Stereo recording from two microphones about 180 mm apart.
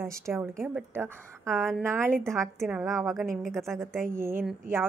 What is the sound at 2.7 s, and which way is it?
Speech, centre (ahead or behind).